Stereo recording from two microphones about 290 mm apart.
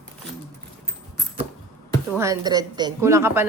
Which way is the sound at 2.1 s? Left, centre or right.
Centre.